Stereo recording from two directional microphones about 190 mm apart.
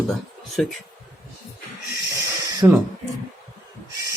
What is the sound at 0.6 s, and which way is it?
Speech, centre (ahead or behind).